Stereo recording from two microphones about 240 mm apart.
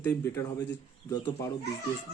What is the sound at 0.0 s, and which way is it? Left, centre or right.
Speech, centre.